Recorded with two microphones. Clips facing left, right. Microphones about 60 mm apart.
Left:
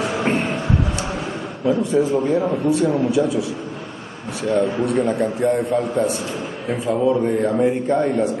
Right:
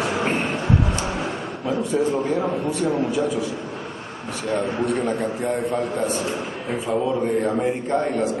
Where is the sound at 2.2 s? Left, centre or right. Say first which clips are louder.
Left 4 dB; centre.